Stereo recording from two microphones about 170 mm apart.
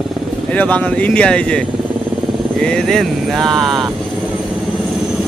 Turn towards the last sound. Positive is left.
turn(degrees=0)  # may be behind; listen again after turning